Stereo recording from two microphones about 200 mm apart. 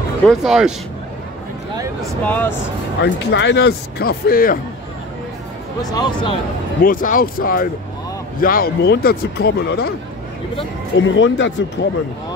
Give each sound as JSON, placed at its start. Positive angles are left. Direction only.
{"t": 0.3, "sound": "speech", "side_deg": 0}
{"t": 2.2, "sound": "speech", "side_deg": 10}
{"t": 3.0, "sound": "speech", "side_deg": 60}
{"t": 5.8, "sound": "speech", "side_deg": 20}
{"t": 6.8, "sound": "speech", "side_deg": 45}
{"t": 11.0, "sound": "speech", "side_deg": 70}